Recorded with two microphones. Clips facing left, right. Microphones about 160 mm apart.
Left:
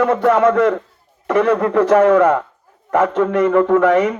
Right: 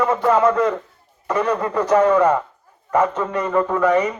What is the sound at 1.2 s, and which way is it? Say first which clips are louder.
A man's voice: left 6 dB; 90° left.